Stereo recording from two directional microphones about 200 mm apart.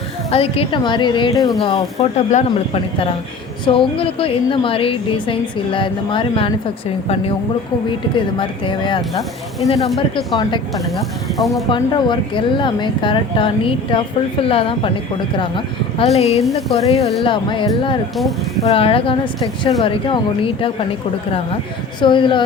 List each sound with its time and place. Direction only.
0.3 s a woman's voice: 30° left (ahead or behind)
8.1 s a woman's voice: 25° left (ahead or behind)
9.8 s speech: centre (ahead or behind)
11.3 s speech: centre (ahead or behind)
11.7 s a woman's voice: 25° left (ahead or behind)
22.0 s a woman's voice: 25° left (ahead or behind)